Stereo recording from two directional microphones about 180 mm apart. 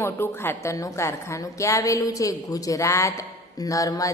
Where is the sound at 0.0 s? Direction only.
10° left (ahead or behind).